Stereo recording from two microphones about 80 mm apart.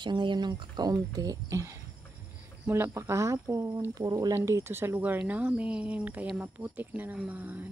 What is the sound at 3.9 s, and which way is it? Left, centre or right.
Speech, right.